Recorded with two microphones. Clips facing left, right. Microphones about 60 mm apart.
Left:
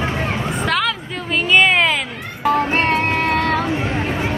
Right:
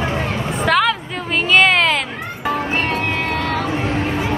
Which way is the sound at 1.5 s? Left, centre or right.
Centre.